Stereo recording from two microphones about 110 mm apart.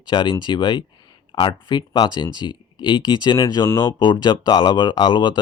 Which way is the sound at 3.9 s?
45° left (ahead or behind).